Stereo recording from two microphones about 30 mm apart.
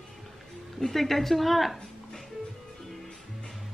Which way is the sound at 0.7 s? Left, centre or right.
Centre.